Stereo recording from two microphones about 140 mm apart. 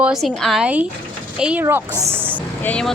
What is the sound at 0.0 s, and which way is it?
Speech, 5° right (ahead or behind).